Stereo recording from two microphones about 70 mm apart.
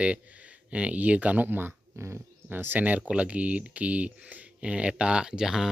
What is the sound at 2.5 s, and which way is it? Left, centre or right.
Speech, right.